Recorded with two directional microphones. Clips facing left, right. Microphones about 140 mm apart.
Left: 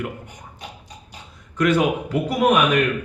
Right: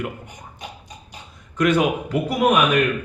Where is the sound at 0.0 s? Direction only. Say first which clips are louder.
Even; 15° right (ahead or behind).